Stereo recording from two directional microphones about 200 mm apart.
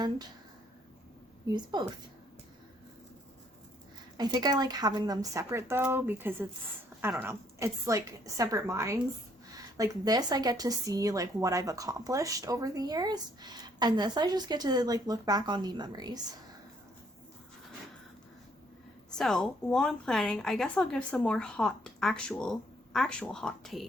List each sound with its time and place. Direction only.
1.7 s a woman's voice: 20° right (ahead or behind)
4.2 s a woman's voice: 20° right (ahead or behind)
19.1 s a woman's voice: centre (ahead or behind)